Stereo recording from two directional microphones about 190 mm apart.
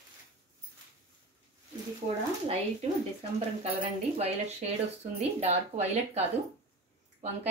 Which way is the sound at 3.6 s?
35° right (ahead or behind).